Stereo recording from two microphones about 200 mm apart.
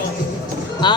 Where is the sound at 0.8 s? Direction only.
20° left (ahead or behind).